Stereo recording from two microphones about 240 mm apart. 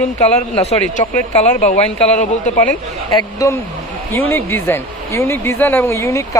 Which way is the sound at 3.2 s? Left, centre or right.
Centre.